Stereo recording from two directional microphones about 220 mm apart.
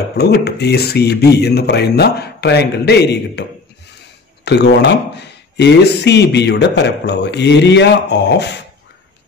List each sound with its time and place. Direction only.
0.2 s speech: 50° left (ahead or behind)
4.5 s speech: 50° left (ahead or behind)